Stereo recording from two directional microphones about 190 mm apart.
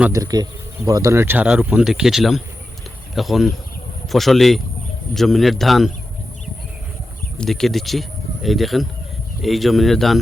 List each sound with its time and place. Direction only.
0.1 s speech: 20° right (ahead or behind); by 5.9 s centre (ahead or behind)
7.3 s speech: centre (ahead or behind)